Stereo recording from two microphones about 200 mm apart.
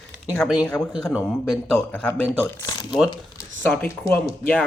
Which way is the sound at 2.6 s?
20° left (ahead or behind).